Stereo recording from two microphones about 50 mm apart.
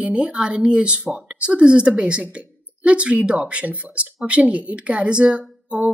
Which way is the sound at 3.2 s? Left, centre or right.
Right.